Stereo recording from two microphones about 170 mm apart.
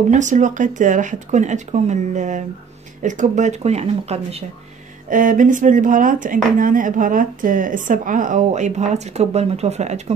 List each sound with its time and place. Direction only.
0.1 s speech: 45° right (ahead or behind)
5.1 s speech: 50° right (ahead or behind)